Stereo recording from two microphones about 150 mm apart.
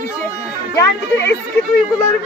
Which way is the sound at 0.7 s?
20° left (ahead or behind).